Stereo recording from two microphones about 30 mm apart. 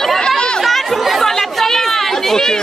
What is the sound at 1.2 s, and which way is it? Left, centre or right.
Chatter, centre.